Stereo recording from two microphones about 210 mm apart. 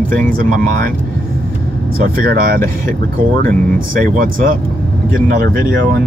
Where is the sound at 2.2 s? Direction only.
45° right (ahead or behind).